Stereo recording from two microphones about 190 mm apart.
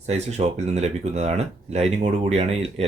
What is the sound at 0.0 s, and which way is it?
Speech, 35° right (ahead or behind).